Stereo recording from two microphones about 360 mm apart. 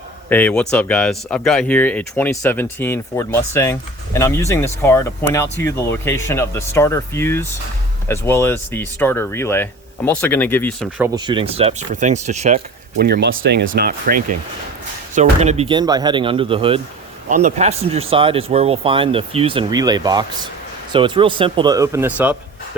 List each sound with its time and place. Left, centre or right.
0.3 s speech: centre